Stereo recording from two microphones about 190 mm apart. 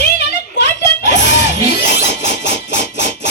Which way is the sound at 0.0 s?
60° left (ahead or behind).